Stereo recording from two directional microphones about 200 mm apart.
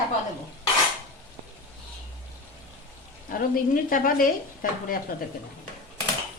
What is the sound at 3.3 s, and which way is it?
Speech, 45° left (ahead or behind).